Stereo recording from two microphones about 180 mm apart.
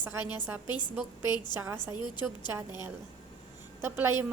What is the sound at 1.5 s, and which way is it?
Speech, 15° right (ahead or behind).